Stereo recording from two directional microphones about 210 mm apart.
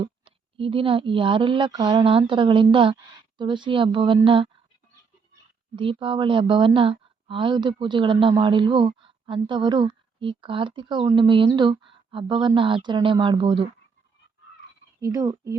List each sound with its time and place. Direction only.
0.0 s a woman's voice: 25° right (ahead or behind)
5.7 s a woman's voice: 25° right (ahead or behind)
15.0 s speech: 15° right (ahead or behind)